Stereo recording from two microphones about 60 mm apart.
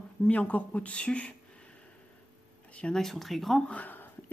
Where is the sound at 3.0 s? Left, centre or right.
Centre.